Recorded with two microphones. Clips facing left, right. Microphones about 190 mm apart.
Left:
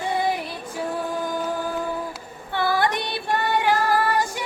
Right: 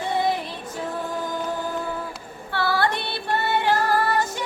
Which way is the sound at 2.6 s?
15° left (ahead or behind).